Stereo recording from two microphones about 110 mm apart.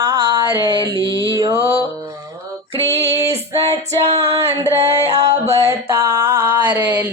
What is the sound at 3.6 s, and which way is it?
Music, 60° right (ahead or behind).